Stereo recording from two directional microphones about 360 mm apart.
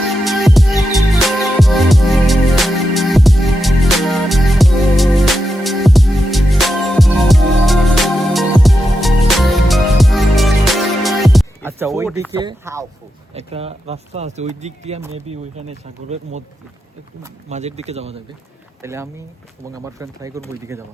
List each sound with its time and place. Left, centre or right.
0.3 s music: centre
12.4 s speech: centre
17.5 s speech: centre